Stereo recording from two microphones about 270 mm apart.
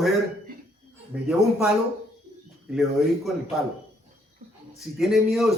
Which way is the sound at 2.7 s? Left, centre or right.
Centre.